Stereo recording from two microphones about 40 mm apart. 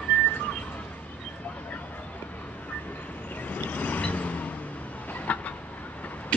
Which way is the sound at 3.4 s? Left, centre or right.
Left.